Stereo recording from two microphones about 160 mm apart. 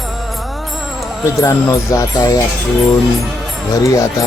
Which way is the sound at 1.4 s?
20° left (ahead or behind).